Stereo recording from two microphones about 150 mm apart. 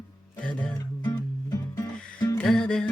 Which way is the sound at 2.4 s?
5° left (ahead or behind).